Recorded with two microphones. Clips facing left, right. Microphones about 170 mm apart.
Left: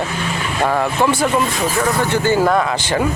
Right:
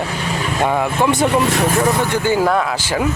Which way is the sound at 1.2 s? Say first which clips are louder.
Right 2 dB; 70° right (ahead or behind).